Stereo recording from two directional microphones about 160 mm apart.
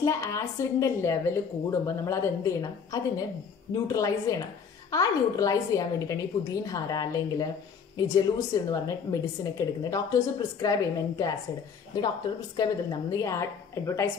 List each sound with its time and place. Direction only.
0.0 s a woman's voice: 20° left (ahead or behind)
12.5 s a woman's voice: 25° left (ahead or behind)